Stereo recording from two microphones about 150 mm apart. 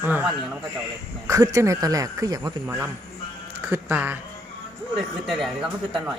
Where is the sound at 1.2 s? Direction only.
20° right (ahead or behind).